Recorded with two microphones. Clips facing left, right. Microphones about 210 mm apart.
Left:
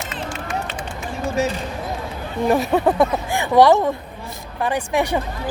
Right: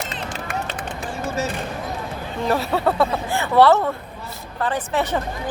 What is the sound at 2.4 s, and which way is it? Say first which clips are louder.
Speech: left 4 dB; 15° left (ahead or behind).